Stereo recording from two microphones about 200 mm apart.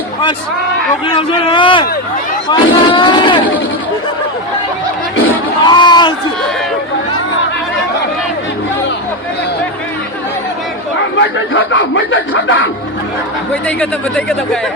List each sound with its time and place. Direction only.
1.0 s speech: 25° left (ahead or behind)
5.6 s a sound: 20° left (ahead or behind)
11.2 s speech: 70° left (ahead or behind)
13.5 s speech: 5° left (ahead or behind)